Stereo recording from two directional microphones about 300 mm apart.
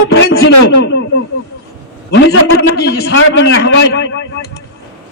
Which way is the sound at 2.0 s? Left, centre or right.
Left.